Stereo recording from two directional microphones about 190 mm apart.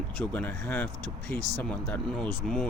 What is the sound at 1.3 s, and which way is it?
Speech, 20° right (ahead or behind).